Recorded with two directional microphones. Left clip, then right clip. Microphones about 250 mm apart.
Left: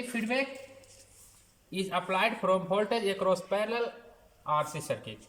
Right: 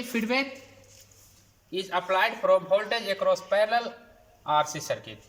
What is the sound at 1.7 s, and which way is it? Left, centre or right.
A man's voice, centre.